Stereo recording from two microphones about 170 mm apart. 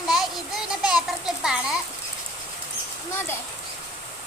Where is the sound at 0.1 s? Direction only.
Centre (ahead or behind).